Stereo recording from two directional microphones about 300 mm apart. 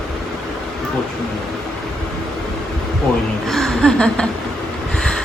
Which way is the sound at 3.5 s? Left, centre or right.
Centre.